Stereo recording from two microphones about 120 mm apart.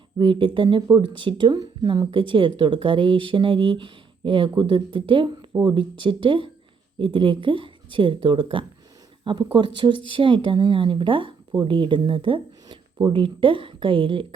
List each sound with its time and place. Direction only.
0.2 s speech: 45° right (ahead or behind)